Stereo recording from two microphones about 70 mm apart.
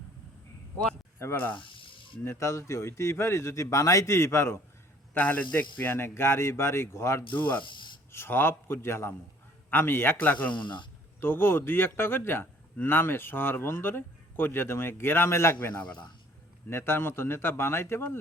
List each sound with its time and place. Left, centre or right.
1.2 s a man's voice: left
5.1 s a man's voice: left
7.3 s a man's voice: left
11.2 s a man's voice: left
16.6 s a man's voice: left